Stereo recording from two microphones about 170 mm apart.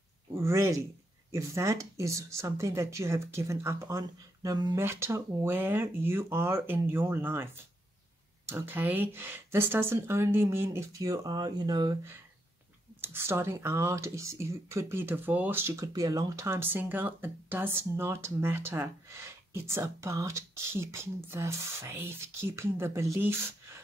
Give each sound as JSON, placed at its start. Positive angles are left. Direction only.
{"t": 0.4, "sound": "speech", "side_deg": -15}
{"t": 8.5, "sound": "speech", "side_deg": -15}
{"t": 13.0, "sound": "speech", "side_deg": -15}